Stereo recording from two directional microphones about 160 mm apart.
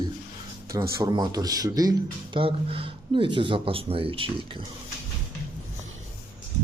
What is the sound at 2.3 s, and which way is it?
Speech, 35° right (ahead or behind).